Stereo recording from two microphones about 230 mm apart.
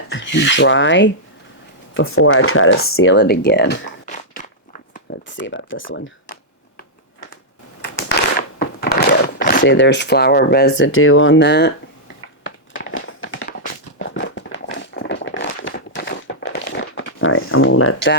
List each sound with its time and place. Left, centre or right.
0.1 s rub: left
1.9 s speech: left
4.0 s walk: left
5.4 s speech: left
7.8 s a sound: left
9.6 s speech: left
12.5 s crumpling: left
14.0 s a sound: left